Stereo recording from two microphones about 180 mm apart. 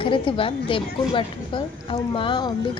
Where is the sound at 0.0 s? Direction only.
30° left (ahead or behind).